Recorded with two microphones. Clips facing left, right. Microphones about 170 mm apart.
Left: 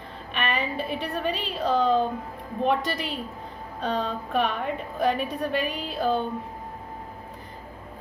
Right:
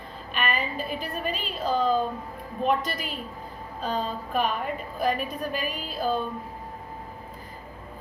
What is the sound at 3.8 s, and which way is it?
A woman's voice, 70° left (ahead or behind).